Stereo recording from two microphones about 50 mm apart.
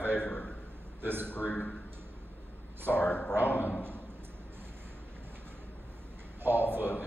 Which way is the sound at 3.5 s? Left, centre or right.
Left.